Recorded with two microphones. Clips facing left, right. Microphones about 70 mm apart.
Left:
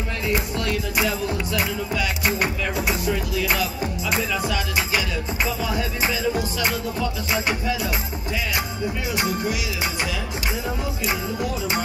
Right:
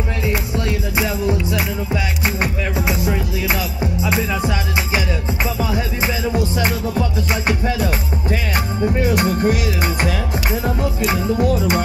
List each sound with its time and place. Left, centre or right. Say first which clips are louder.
0.3 s music: even; right
2.2 s speech: right 1 dB; right
3.1 s music: right 2 dB; right
11.0 s music: right 7 dB; right